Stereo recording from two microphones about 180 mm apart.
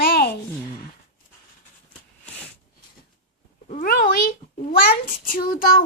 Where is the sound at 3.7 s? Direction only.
50° left (ahead or behind).